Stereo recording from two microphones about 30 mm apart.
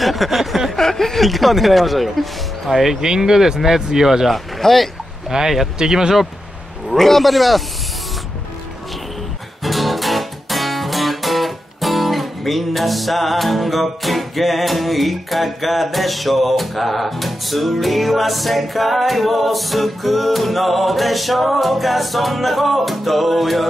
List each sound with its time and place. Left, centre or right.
0.0 s speech: centre
0.7 s chuckle: centre
1.2 s speech: centre
3.0 s speech: right
4.3 s speech: centre
5.3 s speech: right
6.9 s speech: centre
9.6 s music: centre